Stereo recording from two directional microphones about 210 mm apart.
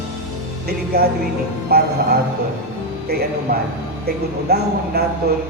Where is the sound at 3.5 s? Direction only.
45° right (ahead or behind).